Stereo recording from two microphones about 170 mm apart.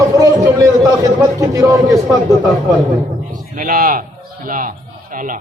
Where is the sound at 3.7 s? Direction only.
55° right (ahead or behind).